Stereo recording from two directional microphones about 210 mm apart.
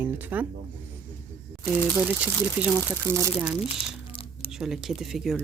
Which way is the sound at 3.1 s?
10° right (ahead or behind).